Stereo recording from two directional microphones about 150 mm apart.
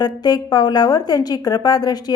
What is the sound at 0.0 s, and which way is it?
A woman's voice, 25° left (ahead or behind).